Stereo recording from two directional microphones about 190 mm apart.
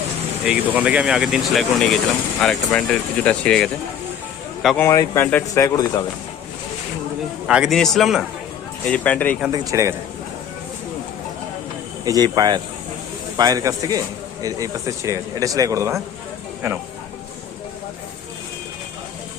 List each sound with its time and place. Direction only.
0.4 s speech: 5° right (ahead or behind)
4.8 s speech: 15° left (ahead or behind)
7.4 s speech: 5° right (ahead or behind)
9.5 s speech: 15° right (ahead or behind)
12.0 s speech: 20° right (ahead or behind)